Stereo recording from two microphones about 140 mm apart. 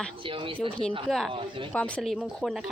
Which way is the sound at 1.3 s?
40° right (ahead or behind).